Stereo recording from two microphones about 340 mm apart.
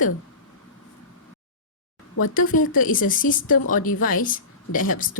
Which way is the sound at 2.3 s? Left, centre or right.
Left.